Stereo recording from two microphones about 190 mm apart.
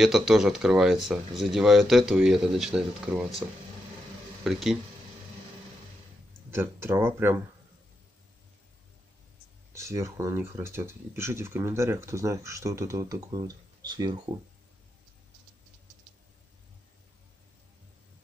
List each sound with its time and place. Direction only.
0.0 s speech: centre (ahead or behind)
4.5 s speech: centre (ahead or behind)
6.5 s speech: 15° right (ahead or behind)
9.8 s speech: 15° right (ahead or behind)